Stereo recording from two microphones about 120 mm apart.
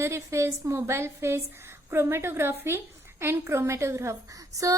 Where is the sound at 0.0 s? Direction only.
25° right (ahead or behind).